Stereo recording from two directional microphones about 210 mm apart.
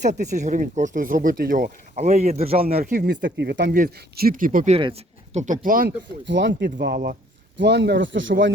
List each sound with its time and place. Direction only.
0.0 s speech: 35° right (ahead or behind)
2.8 s speech: 50° right (ahead or behind)
3.8 s speech: 40° right (ahead or behind)
6.2 s speech: 55° right (ahead or behind)